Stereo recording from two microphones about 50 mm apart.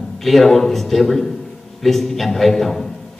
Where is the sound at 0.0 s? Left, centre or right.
Centre.